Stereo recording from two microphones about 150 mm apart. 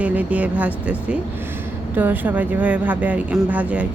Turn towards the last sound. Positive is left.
turn(degrees=-10)  # may be behind; listen again after turning